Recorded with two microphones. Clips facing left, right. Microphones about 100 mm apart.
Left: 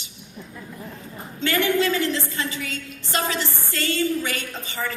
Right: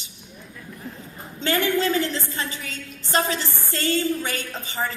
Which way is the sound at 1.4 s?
35° right (ahead or behind).